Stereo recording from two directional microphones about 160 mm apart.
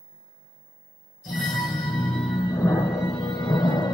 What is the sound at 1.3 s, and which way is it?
Music, 25° left (ahead or behind).